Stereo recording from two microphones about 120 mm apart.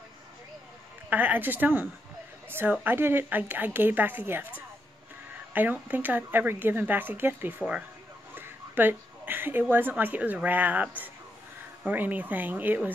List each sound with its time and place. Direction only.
1.1 s a woman's voice: 15° right (ahead or behind)